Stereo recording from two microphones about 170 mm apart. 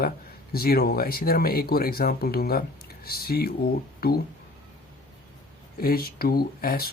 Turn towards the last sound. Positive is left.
turn(degrees=60)  # may be behind; listen again after turning